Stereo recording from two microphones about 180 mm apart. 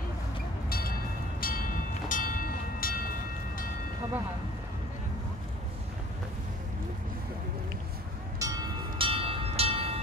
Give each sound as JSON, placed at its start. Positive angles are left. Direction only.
{"t": 0.7, "sound": "music", "side_deg": 55}
{"t": 1.4, "sound": "train", "side_deg": 50}
{"t": 8.4, "sound": "music", "side_deg": -20}